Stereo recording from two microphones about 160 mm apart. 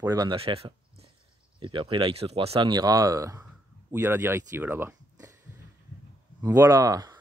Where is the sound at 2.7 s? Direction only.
25° right (ahead or behind).